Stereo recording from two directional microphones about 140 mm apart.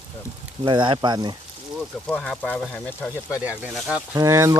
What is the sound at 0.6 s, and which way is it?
Speech, 35° right (ahead or behind).